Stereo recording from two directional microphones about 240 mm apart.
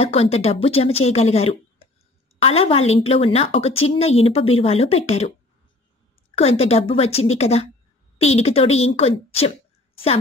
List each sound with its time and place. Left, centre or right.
0.0 s speech: left
6.6 s speech: left